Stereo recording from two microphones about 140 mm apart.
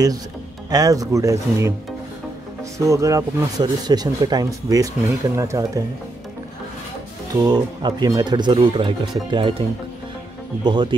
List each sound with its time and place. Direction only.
0.7 s speech: 25° right (ahead or behind)
2.8 s speech: 20° right (ahead or behind)
7.3 s speech: 30° right (ahead or behind)